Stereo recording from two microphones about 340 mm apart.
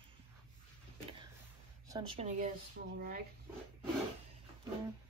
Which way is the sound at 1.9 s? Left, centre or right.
Centre.